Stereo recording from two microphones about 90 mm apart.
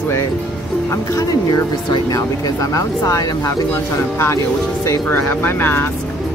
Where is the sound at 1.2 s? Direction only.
45° left (ahead or behind).